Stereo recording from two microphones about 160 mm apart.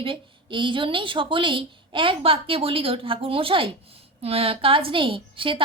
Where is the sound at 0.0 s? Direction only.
30° right (ahead or behind).